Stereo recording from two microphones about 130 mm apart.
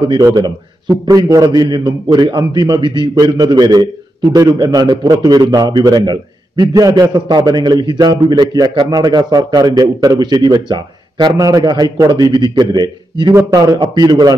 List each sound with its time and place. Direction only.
0.1 s a man's voice: 30° right (ahead or behind)